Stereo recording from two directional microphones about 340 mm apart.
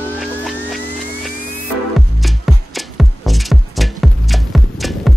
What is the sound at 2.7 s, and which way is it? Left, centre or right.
Music, centre.